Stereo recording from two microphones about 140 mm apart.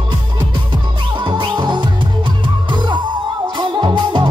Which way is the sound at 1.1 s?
35° right (ahead or behind).